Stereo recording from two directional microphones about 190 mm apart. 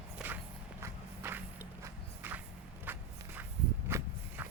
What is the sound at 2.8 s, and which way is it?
Walk, 10° right (ahead or behind).